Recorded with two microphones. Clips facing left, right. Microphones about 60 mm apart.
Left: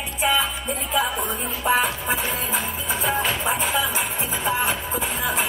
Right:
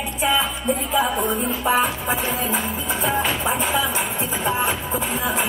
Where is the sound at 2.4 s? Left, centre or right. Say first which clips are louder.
Right 2 dB; centre.